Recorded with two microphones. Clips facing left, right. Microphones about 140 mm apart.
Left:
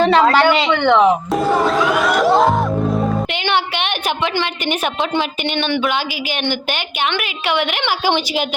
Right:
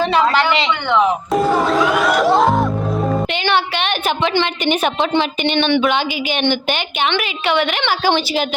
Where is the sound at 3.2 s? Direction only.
15° left (ahead or behind).